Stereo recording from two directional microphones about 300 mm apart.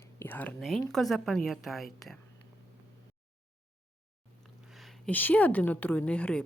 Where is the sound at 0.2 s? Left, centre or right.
Centre.